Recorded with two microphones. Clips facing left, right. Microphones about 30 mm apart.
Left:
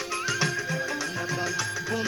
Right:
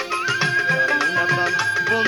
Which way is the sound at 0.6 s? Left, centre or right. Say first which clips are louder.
Right 11 dB; right.